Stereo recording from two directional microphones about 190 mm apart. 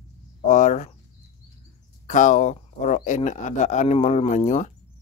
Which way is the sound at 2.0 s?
40° left (ahead or behind).